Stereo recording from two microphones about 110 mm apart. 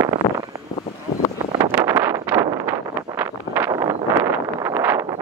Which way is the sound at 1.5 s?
35° right (ahead or behind).